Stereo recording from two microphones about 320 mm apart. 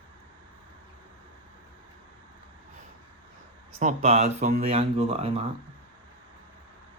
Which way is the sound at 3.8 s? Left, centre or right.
Centre.